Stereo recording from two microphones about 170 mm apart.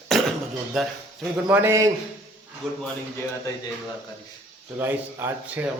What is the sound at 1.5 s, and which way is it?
Speech, 15° right (ahead or behind).